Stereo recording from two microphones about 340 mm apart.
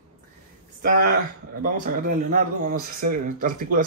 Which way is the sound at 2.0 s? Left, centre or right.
Right.